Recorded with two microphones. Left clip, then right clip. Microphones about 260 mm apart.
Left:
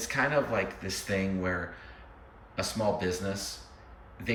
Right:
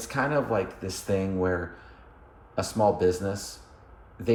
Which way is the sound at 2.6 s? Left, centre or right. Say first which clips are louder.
Right 7 dB; right.